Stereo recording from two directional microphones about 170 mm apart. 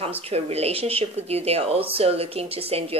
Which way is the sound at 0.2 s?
35° right (ahead or behind).